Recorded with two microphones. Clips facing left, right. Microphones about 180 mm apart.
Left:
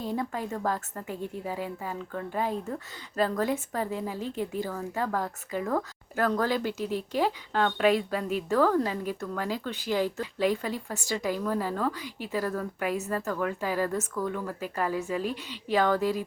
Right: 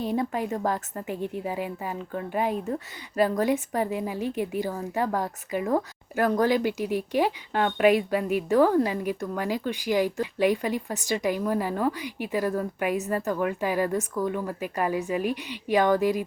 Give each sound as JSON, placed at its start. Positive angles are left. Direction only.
{"t": 0.0, "sound": "a woman's voice", "side_deg": -20}